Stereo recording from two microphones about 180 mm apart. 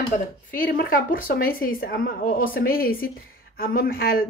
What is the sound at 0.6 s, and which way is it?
A woman's voice, 55° left (ahead or behind).